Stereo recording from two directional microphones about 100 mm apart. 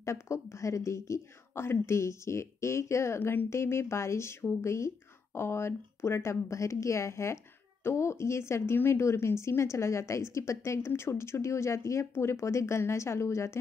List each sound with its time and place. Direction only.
0.0 s speech: 30° left (ahead or behind)